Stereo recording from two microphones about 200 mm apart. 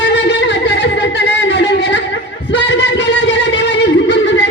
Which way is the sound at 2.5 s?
60° left (ahead or behind).